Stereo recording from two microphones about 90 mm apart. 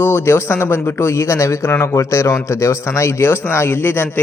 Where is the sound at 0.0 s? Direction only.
25° left (ahead or behind).